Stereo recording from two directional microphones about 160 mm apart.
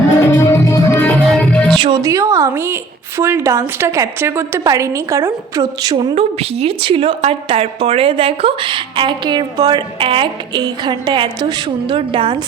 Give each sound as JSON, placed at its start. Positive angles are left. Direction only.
{"t": 0.3, "sound": "music", "side_deg": 15}
{"t": 1.8, "sound": "a woman's voice", "side_deg": -25}
{"t": 6.1, "sound": "a woman's voice", "side_deg": -40}